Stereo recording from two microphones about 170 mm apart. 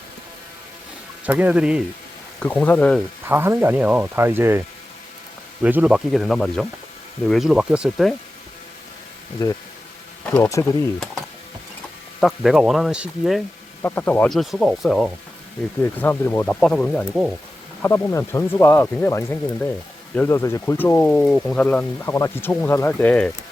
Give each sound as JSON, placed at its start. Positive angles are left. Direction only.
{"t": 1.2, "sound": "speech", "side_deg": -10}
{"t": 2.4, "sound": "speech", "side_deg": 10}
{"t": 3.2, "sound": "speech", "side_deg": -15}
{"t": 5.6, "sound": "speech", "side_deg": -5}
{"t": 9.4, "sound": "speech", "side_deg": 25}
{"t": 12.2, "sound": "speech", "side_deg": 0}
{"t": 13.8, "sound": "speech", "side_deg": 10}
{"t": 17.8, "sound": "speech", "side_deg": 15}